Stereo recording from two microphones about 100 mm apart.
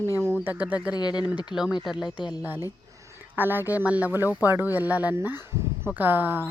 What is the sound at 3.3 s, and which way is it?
Speech, 20° right (ahead or behind).